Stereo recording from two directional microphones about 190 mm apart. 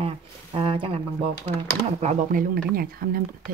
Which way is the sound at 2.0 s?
50° right (ahead or behind).